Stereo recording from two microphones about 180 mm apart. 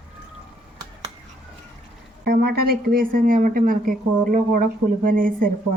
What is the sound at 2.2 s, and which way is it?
Speech, 60° right (ahead or behind).